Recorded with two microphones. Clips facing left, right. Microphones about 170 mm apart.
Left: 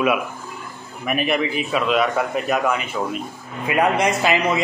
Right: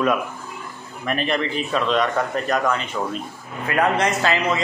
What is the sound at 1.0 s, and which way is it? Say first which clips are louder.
A man's voice: left 2 dB; 10° left (ahead or behind).